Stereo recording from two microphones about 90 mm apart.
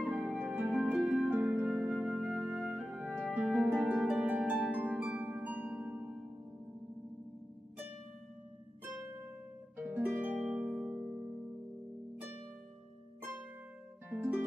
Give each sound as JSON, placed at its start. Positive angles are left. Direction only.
{"t": 0.0, "sound": "music", "side_deg": -5}
{"t": 0.9, "sound": "harp", "side_deg": -10}
{"t": 1.8, "sound": "music", "side_deg": -10}
{"t": 3.5, "sound": "harp", "side_deg": -15}
{"t": 9.8, "sound": "harp", "side_deg": -20}
{"t": 13.2, "sound": "harp", "side_deg": -20}
{"t": 14.1, "sound": "music", "side_deg": -20}